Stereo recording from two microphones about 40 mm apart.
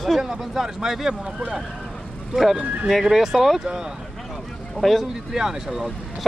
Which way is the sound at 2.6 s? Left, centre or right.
Right.